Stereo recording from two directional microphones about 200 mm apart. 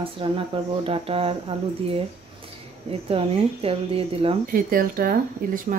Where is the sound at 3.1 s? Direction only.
30° right (ahead or behind).